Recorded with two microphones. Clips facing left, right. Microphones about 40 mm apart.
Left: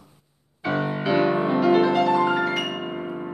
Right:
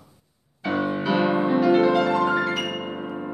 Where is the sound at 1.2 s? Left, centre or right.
Centre.